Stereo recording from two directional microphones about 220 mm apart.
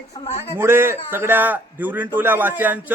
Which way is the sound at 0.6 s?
10° right (ahead or behind).